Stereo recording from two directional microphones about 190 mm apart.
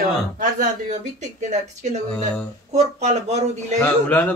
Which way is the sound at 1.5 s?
40° right (ahead or behind).